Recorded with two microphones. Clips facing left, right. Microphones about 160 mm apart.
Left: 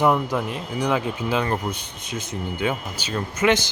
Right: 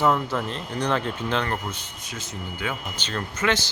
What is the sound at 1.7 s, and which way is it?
Speech, 20° left (ahead or behind).